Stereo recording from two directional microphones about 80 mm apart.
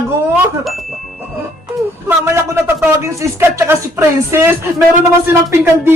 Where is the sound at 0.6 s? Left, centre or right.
Centre.